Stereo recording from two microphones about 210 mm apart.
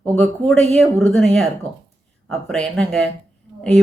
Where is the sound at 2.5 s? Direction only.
5° left (ahead or behind).